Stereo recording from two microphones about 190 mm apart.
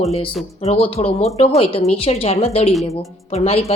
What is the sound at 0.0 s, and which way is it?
Speech, 30° left (ahead or behind).